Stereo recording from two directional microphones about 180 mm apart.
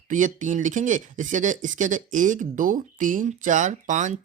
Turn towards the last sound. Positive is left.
turn(degrees=-45)  # may be behind; listen again after turning